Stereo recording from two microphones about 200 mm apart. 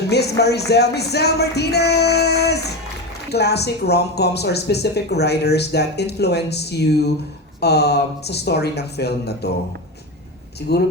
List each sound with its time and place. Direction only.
0.1 s speech: 55° left (ahead or behind)
10.7 s speech: 55° left (ahead or behind)